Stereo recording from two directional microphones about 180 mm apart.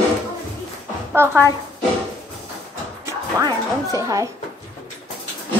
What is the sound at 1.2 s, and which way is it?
Speech, 15° right (ahead or behind).